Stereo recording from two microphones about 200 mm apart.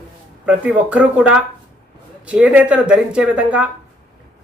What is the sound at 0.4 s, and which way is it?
Speech, 5° right (ahead or behind).